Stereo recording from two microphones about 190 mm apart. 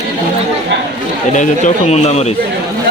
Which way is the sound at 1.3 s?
35° left (ahead or behind).